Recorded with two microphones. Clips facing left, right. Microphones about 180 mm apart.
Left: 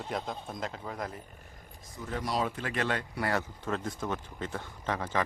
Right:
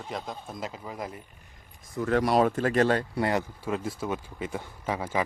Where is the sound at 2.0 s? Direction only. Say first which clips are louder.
Right 9 dB; 75° right (ahead or behind); by 3.0 s 40° right (ahead or behind).